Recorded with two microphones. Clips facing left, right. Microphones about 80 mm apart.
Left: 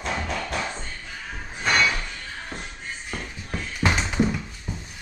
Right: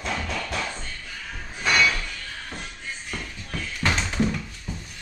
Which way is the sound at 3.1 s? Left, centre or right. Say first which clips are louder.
Left 3 dB; centre.